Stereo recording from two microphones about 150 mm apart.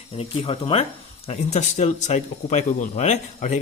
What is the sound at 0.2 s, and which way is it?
Speech, 40° left (ahead or behind).